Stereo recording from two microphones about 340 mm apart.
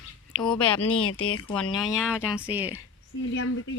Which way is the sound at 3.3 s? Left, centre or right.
Left.